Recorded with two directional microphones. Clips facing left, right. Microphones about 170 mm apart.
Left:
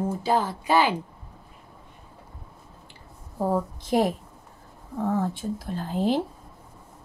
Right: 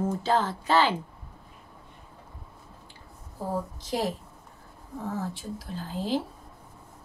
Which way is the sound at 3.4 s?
55° left (ahead or behind).